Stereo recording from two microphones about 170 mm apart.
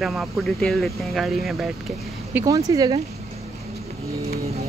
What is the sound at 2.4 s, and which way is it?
Speech, 20° right (ahead or behind).